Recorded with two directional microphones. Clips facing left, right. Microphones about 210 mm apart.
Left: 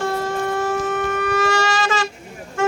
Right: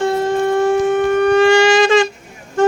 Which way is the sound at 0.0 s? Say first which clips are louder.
Right 7 dB; 25° right (ahead or behind).